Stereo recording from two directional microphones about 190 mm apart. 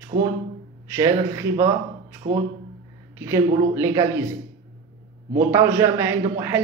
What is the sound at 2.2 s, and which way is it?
Speech, 45° right (ahead or behind).